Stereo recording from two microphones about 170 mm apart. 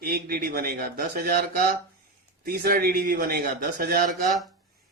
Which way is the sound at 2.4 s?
65° right (ahead or behind).